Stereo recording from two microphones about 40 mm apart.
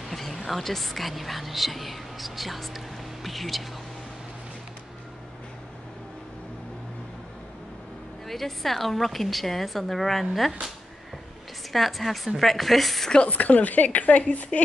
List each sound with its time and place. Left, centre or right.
0.1 s speech: centre
8.3 s a woman's voice: centre
11.7 s a woman's voice: centre
13.3 s speech: left